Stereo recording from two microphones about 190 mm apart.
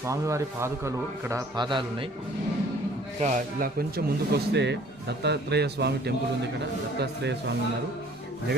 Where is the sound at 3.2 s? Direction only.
45° right (ahead or behind).